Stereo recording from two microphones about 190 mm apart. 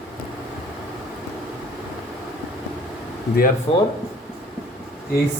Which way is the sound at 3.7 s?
30° left (ahead or behind).